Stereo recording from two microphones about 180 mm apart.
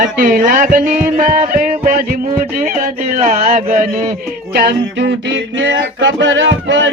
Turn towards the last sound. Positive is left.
turn(degrees=-90)